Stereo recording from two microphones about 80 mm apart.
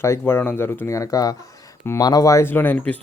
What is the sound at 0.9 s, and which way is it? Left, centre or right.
Speech, left.